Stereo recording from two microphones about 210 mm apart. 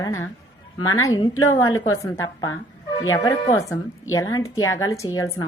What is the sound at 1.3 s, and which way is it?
Speech, 85° left.